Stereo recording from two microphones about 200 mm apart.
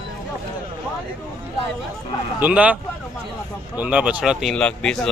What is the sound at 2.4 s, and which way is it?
Speech, 5° right (ahead or behind).